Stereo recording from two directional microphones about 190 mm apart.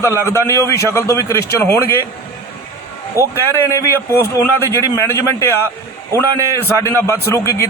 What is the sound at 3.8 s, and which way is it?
Speech, 15° left (ahead or behind).